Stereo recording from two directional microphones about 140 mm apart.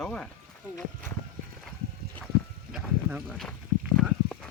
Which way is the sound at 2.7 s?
5° right (ahead or behind).